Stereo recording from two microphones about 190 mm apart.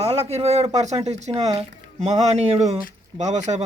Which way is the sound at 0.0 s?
30° right (ahead or behind).